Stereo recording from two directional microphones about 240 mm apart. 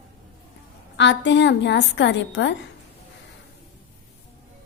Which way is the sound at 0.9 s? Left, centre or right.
Left.